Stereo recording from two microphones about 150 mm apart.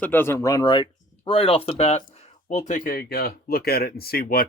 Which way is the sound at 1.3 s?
40° left (ahead or behind).